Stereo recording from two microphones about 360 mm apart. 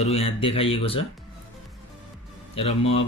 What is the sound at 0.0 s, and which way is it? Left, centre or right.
Speech, centre.